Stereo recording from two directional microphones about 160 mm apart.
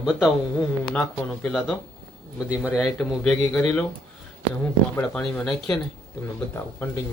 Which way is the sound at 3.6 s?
15° left (ahead or behind).